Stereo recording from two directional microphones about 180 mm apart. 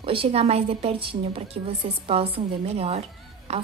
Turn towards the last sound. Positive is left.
turn(degrees=-35)  # may be behind; listen again after turning